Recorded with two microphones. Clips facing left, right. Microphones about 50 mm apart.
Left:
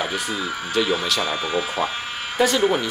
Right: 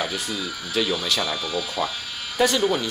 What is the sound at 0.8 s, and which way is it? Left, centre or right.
Speech, centre.